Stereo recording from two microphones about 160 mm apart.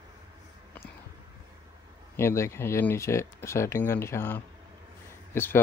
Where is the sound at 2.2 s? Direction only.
15° left (ahead or behind).